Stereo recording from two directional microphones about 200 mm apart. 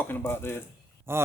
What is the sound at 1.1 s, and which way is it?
Speech, 10° right (ahead or behind).